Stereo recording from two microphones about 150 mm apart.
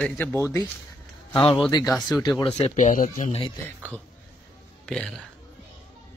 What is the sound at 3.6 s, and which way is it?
Speech, 10° left (ahead or behind).